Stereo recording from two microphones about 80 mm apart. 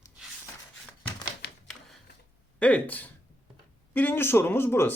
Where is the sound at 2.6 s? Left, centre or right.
Centre.